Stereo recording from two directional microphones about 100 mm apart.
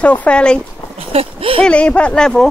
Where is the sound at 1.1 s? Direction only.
75° right (ahead or behind).